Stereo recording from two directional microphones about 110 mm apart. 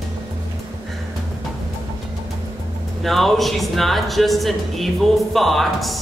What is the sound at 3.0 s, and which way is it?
Speech, centre (ahead or behind).